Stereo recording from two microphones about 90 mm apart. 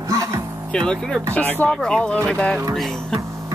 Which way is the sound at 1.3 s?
15° left (ahead or behind).